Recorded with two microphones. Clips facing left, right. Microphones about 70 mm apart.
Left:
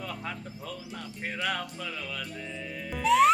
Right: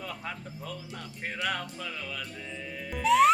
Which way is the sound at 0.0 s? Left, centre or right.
Centre.